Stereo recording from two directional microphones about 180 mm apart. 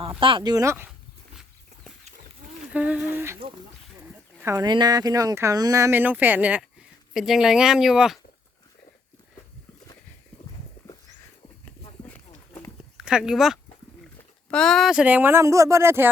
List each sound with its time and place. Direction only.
0.2 s speech: 30° right (ahead or behind)
2.7 s speech: 10° right (ahead or behind)
4.4 s speech: 15° right (ahead or behind)
12.1 s run: 15° left (ahead or behind)
13.1 s speech: 5° right (ahead or behind)